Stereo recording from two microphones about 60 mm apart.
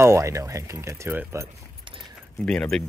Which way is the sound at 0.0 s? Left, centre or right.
Right.